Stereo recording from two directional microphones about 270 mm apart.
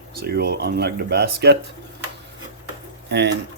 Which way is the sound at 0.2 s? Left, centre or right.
Right.